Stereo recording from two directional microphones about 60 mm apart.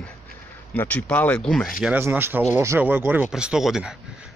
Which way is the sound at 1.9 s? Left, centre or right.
Right.